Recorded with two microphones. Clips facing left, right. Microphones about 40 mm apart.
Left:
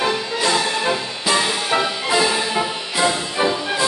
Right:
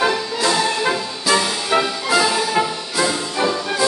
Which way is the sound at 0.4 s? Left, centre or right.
Left.